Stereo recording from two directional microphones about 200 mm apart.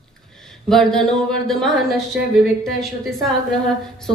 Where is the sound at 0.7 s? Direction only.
Centre (ahead or behind).